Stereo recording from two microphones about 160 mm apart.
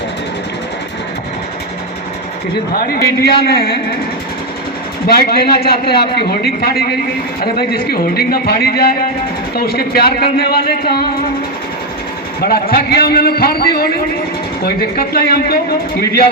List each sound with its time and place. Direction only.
2.7 s a man's voice: 70° left (ahead or behind)
5.0 s a man's voice: 75° left (ahead or behind)
12.4 s a man's voice: 70° left (ahead or behind)